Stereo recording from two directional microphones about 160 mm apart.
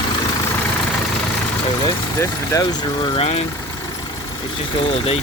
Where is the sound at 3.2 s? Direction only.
40° left (ahead or behind).